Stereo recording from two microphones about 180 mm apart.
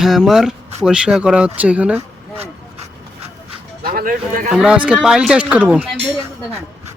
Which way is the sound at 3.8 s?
50° right (ahead or behind).